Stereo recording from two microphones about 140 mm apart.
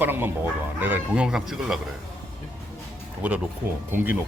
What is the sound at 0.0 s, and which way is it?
Speech, 15° right (ahead or behind).